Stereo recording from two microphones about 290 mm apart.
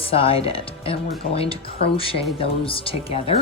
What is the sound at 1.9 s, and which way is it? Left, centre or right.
Speech, centre.